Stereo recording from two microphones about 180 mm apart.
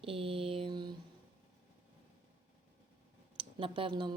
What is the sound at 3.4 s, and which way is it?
Speech, 30° right (ahead or behind).